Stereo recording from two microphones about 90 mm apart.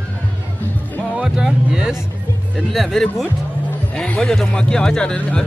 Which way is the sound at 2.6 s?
Centre (ahead or behind).